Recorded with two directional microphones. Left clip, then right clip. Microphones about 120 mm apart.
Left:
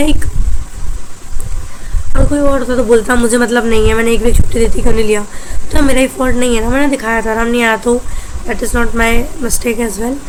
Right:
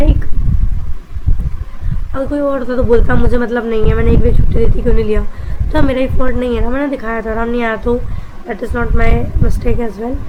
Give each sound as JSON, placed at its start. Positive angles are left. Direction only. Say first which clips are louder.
{"t": 2.3, "sound": "speech", "louder": "left 3 dB", "side_deg": 5}
{"t": 3.1, "sound": "speech", "louder": "left 4 dB", "side_deg": 20}